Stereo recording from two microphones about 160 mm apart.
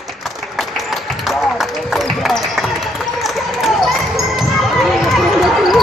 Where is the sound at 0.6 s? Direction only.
Centre (ahead or behind).